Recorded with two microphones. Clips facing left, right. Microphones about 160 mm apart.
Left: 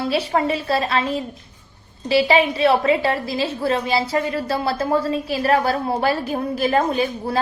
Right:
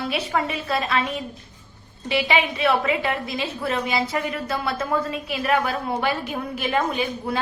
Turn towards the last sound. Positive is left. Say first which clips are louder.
# left 4 dB
turn(degrees=35)  # may be behind; listen again after turning